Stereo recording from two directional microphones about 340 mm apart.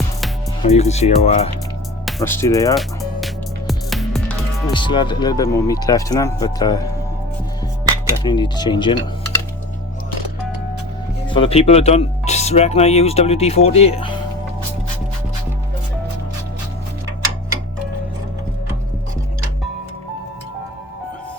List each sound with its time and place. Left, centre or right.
0.6 s speech: centre
2.0 s music: centre
4.7 s speech: centre
8.2 s speech: centre
11.3 s speech: centre